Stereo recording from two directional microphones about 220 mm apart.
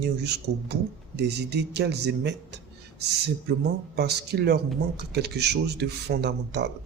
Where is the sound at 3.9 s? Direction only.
50° right (ahead or behind).